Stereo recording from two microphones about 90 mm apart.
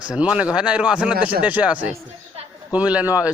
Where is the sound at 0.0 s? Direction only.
10° right (ahead or behind).